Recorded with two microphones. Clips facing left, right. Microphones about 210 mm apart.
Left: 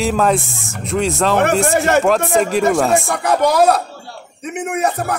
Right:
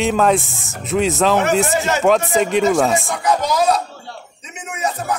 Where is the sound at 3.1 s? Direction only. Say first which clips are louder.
Left 4 dB; 60° left (ahead or behind).